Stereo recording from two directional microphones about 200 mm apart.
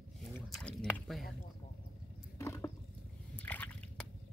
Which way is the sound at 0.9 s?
Centre (ahead or behind).